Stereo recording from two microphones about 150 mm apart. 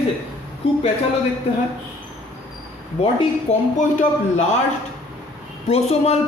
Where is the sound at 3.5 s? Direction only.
55° left (ahead or behind).